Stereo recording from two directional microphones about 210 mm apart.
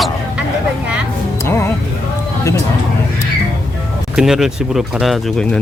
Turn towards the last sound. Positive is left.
turn(degrees=0)  # may be behind; listen again after turning